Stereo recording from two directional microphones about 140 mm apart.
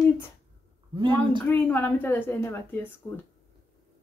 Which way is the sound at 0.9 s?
35° right (ahead or behind).